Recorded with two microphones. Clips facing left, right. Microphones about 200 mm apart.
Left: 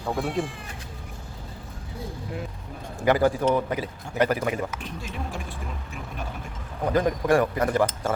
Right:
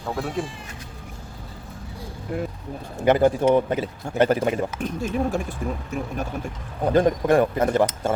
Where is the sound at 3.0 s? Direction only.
20° right (ahead or behind).